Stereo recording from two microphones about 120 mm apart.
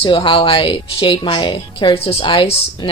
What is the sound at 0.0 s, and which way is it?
A woman's voice, 45° left (ahead or behind).